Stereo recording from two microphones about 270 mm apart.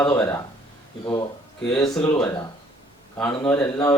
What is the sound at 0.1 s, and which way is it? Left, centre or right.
Speech, centre.